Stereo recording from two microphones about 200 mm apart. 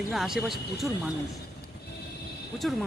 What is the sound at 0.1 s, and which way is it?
Speech, centre (ahead or behind).